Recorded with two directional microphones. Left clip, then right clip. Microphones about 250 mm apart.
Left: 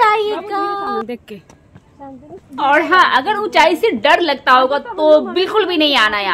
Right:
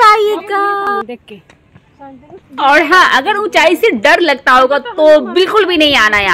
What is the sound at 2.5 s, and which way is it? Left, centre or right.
A woman's voice, centre.